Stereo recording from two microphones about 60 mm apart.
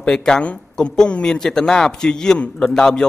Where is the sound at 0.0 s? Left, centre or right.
Centre.